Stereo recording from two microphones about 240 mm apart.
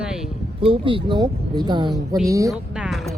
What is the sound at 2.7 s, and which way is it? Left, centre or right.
Music, centre.